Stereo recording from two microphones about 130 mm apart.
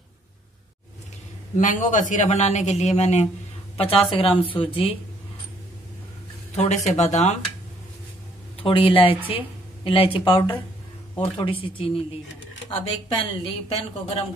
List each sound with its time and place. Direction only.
1.6 s a man's voice: 75° left (ahead or behind); by 3.3 s 60° left (ahead or behind)
3.7 s a woman's voice: 45° left (ahead or behind)
6.5 s a man's voice: 60° left (ahead or behind)
8.6 s speech: 45° left (ahead or behind)